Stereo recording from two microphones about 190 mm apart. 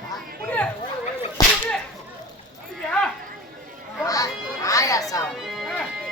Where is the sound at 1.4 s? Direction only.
20° left (ahead or behind).